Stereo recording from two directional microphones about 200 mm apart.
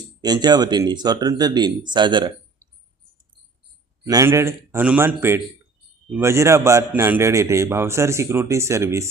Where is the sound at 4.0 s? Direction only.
15° right (ahead or behind).